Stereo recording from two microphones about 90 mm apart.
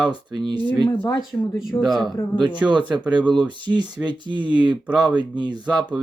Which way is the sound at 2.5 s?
60° right (ahead or behind).